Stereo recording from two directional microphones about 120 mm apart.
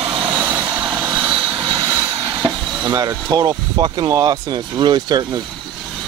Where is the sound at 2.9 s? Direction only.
30° right (ahead or behind).